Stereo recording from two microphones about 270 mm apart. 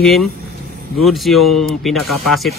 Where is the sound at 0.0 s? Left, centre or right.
Centre.